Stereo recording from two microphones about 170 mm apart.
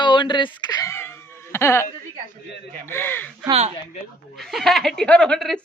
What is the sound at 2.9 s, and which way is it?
Speech, 10° left (ahead or behind).